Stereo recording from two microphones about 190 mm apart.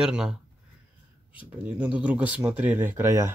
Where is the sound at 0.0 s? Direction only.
5° right (ahead or behind).